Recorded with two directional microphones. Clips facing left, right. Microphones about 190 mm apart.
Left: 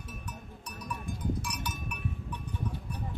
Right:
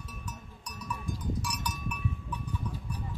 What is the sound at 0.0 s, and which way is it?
Cowbell, 55° left (ahead or behind).